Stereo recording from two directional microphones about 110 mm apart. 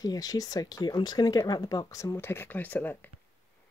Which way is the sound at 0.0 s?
35° left (ahead or behind).